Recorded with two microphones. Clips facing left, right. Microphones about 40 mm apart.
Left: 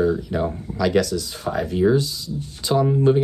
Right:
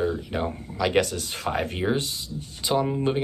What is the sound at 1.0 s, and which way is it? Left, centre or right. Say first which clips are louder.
Speech: left 2 dB; right.